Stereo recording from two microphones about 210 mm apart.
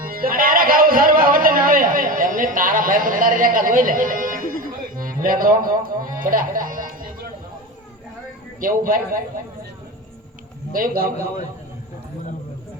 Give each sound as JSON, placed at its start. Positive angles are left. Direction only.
{"t": 0.1, "sound": "a sound", "side_deg": -45}
{"t": 8.6, "sound": "a man's voice", "side_deg": -40}
{"t": 10.7, "sound": "a man's voice", "side_deg": -45}